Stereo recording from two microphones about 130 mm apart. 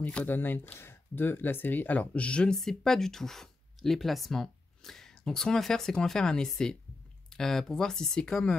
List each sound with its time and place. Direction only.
0.0 s speech: 15° left (ahead or behind)